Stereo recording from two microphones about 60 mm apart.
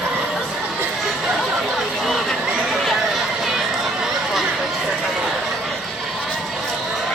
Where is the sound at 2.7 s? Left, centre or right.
Centre.